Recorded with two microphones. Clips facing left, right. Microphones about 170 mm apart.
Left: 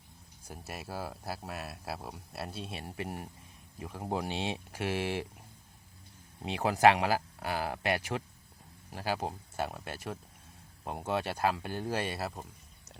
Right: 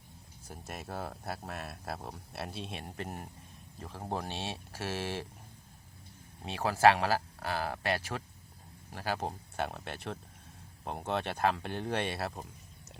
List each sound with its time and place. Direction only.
0.4 s speech: 10° left (ahead or behind)
6.4 s speech: 15° left (ahead or behind); by 12.5 s centre (ahead or behind)